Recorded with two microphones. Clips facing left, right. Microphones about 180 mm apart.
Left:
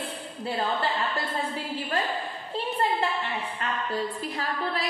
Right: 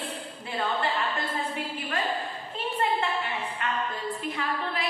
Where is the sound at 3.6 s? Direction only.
35° left (ahead or behind).